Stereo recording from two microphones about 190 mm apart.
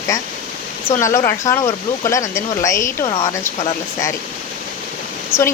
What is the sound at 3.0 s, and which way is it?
Speech, 30° left (ahead or behind).